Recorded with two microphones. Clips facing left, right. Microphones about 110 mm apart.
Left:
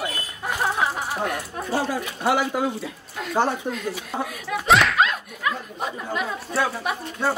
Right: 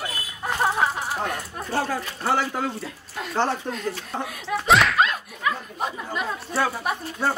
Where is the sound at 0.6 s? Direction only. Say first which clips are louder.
Right 1 dB; centre (ahead or behind).